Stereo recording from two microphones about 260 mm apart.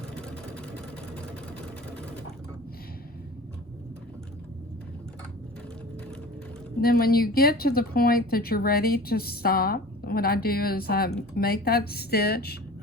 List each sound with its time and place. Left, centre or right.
0.2 s vehicle: centre
6.8 s speech: left